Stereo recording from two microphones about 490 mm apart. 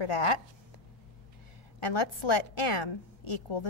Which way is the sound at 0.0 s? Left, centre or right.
Left.